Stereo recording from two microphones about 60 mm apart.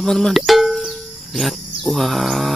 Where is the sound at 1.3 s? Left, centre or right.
Centre.